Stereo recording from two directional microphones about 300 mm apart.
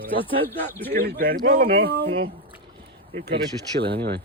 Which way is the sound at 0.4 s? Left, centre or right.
Centre.